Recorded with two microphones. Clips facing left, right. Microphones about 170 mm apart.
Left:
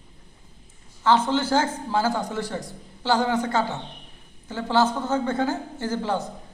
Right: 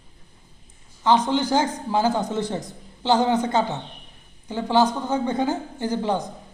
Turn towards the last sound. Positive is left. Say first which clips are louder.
# right 2 dB
turn(degrees=-15)  # may be behind; listen again after turning